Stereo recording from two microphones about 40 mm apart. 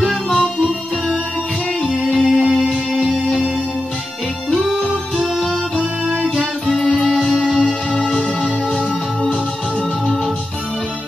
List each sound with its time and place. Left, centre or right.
1.8 s music: centre
2.1 s music: centre
5.1 s music: centre
7.4 s music: centre